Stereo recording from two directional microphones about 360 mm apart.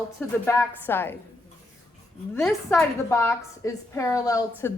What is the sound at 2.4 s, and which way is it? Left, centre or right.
A woman's voice, centre.